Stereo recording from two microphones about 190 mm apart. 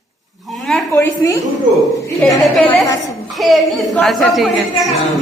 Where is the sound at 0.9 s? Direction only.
15° left (ahead or behind).